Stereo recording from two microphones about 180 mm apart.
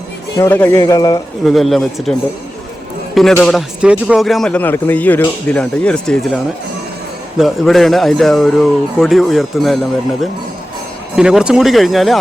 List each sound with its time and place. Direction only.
0.3 s a man's voice: 15° left (ahead or behind)
1.5 s speech: centre (ahead or behind)
3.3 s speech: centre (ahead or behind)